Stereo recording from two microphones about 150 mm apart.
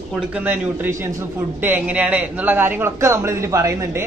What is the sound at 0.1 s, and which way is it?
A man's voice, 10° right (ahead or behind).